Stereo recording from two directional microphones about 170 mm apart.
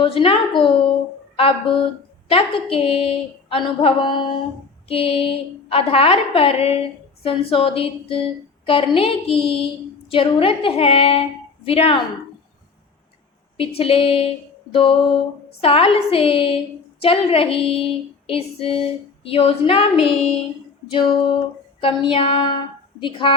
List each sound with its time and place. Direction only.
0.0 s a woman's voice: 35° left (ahead or behind)
13.6 s a woman's voice: 35° left (ahead or behind)
20.1 s child singing: centre (ahead or behind)
21.8 s a woman's voice: 30° left (ahead or behind)